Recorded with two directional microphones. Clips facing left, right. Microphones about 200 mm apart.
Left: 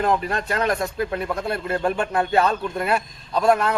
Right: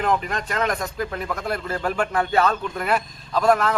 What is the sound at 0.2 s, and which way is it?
Speech, 35° left (ahead or behind).